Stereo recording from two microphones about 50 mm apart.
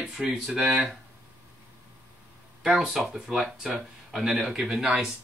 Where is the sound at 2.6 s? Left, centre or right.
Centre.